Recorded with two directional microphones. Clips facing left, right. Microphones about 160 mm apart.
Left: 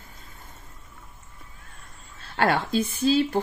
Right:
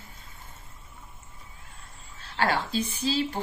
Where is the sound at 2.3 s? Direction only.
50° left (ahead or behind).